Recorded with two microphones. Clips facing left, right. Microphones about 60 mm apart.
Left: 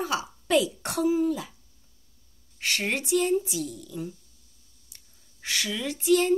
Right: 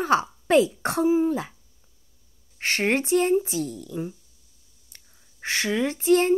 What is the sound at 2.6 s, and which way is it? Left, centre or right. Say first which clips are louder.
A woman's voice: right 5 dB; right.